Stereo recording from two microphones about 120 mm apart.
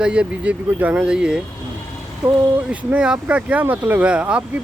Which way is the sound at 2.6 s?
10° right (ahead or behind).